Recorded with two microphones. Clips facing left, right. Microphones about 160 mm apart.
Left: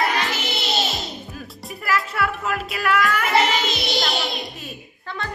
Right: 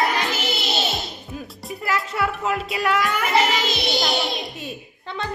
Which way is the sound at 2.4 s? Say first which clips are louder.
Right 1 dB; 25° right (ahead or behind).